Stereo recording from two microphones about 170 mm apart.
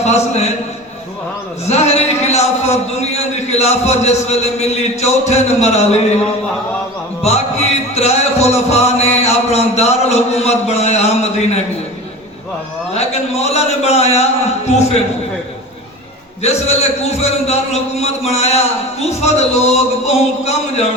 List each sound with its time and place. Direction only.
0.0 s a man's voice: 40° left (ahead or behind)
1.6 s a sound: 40° left (ahead or behind)
3.3 s a man's voice: 40° left (ahead or behind)
7.3 s a man's voice: 40° left (ahead or behind)
12.9 s a man's voice: 40° left (ahead or behind)
16.4 s a man's voice: 40° left (ahead or behind)